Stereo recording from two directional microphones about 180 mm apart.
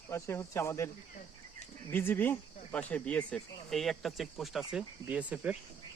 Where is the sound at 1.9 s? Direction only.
10° left (ahead or behind).